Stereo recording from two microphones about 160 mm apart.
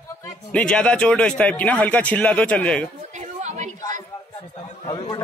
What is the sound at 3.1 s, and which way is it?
Chatter, 50° right (ahead or behind).